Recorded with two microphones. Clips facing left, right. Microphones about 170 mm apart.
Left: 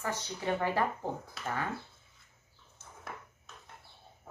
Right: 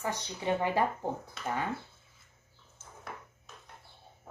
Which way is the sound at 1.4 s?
Centre (ahead or behind).